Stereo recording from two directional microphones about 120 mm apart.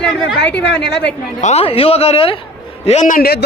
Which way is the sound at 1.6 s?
50° left (ahead or behind).